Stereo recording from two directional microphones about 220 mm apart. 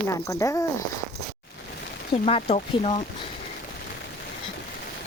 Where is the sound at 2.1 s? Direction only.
25° left (ahead or behind).